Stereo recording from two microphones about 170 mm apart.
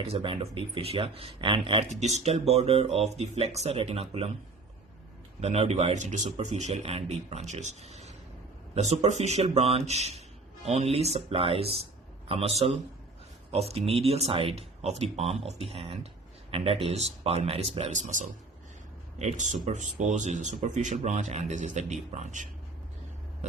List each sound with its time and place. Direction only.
0.0 s speech: 35° right (ahead or behind)
1.9 s speech: 40° right (ahead or behind)
5.4 s speech: 40° right (ahead or behind)